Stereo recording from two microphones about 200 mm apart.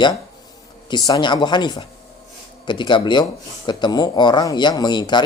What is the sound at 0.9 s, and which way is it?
Speech, 20° left (ahead or behind).